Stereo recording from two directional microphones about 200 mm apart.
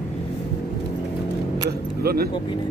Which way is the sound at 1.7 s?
50° right (ahead or behind).